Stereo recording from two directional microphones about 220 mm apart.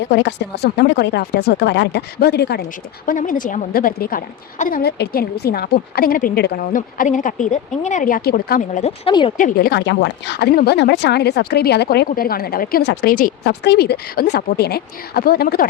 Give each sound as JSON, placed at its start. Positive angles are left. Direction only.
{"t": 0.1, "sound": "a woman's voice", "side_deg": 50}
{"t": 3.1, "sound": "a woman's voice", "side_deg": 35}
{"t": 9.0, "sound": "speech", "side_deg": 25}
{"t": 9.4, "sound": "a woman's voice", "side_deg": 45}